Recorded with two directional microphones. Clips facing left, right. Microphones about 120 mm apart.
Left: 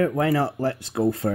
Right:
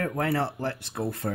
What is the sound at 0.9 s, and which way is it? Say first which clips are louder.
Speech: left 8 dB; 90° left.